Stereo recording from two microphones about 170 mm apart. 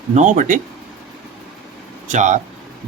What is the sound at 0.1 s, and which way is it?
Speech, 45° right (ahead or behind).